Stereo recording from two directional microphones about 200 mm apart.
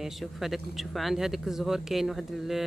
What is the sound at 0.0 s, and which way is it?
Speech, centre (ahead or behind).